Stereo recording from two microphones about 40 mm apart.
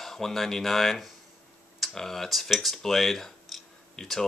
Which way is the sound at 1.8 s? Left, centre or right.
Centre.